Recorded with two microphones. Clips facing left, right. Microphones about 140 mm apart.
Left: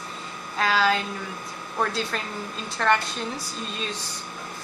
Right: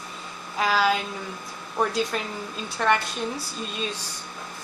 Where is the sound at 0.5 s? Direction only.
10° right (ahead or behind).